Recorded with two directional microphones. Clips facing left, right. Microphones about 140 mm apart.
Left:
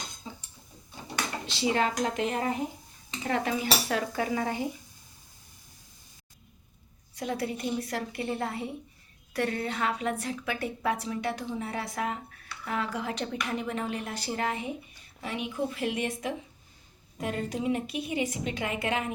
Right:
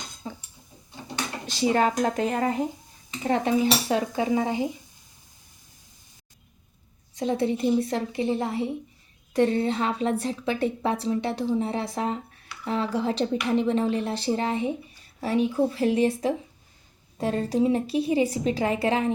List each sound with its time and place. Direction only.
0.2 s a sound: 55° right (ahead or behind)
1.5 s speech: 45° right (ahead or behind)
3.2 s a woman's voice: 30° right (ahead or behind)
7.2 s a woman's voice: 25° right (ahead or behind)